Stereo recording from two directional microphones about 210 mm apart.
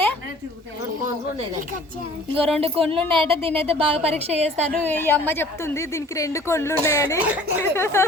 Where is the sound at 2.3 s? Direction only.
25° right (ahead or behind).